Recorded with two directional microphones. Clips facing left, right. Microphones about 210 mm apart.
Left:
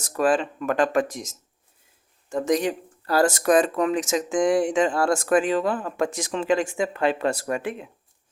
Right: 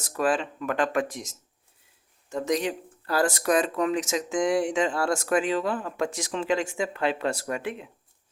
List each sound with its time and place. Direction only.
0.2 s speech: 45° left (ahead or behind)
2.3 s speech: 50° left (ahead or behind)